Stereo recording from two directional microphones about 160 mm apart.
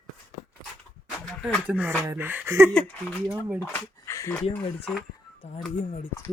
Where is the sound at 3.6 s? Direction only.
15° left (ahead or behind).